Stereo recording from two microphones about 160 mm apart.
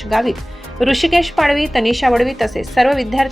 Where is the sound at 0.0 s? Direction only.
Centre (ahead or behind).